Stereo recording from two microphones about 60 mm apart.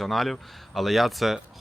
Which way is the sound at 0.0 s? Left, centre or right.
Centre.